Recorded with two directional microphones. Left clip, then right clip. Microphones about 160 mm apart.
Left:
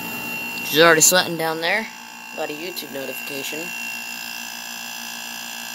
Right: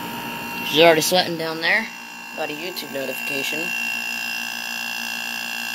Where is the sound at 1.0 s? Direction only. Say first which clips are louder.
Left 2 dB; 45° left (ahead or behind).